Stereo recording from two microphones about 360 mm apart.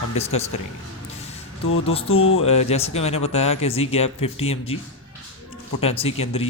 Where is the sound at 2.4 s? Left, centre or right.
Centre.